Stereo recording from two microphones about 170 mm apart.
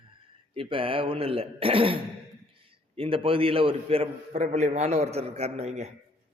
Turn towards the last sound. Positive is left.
turn(degrees=-40)  # may be behind; listen again after turning